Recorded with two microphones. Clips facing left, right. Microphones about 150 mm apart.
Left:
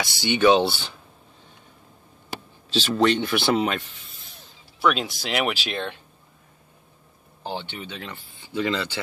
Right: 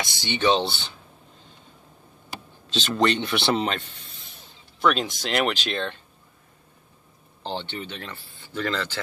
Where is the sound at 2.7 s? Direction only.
5° left (ahead or behind).